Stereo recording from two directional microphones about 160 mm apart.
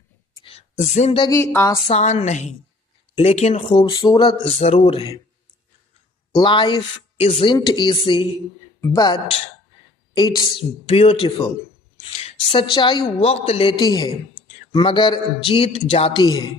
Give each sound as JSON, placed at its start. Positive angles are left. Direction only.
{"t": 0.8, "sound": "a woman's voice", "side_deg": 45}
{"t": 1.2, "sound": "a woman's voice", "side_deg": 20}
{"t": 1.9, "sound": "a woman's voice", "side_deg": 45}
{"t": 3.7, "sound": "speech", "side_deg": 30}
{"t": 6.3, "sound": "speech", "side_deg": 30}
{"t": 10.6, "sound": "speech", "side_deg": 35}